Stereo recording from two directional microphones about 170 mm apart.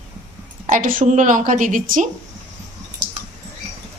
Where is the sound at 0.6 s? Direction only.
50° right (ahead or behind).